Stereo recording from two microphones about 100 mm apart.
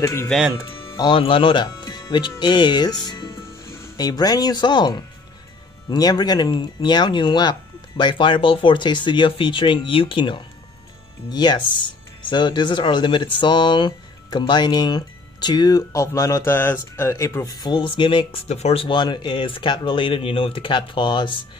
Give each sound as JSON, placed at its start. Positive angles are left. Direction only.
{"t": 0.0, "sound": "speech", "side_deg": 25}
{"t": 0.9, "sound": "speech", "side_deg": 55}
{"t": 3.6, "sound": "music", "side_deg": 25}
{"t": 3.9, "sound": "speech", "side_deg": 40}
{"t": 11.2, "sound": "speech", "side_deg": 45}
{"t": 17.6, "sound": "speech", "side_deg": 50}
{"t": 18.9, "sound": "speech", "side_deg": 50}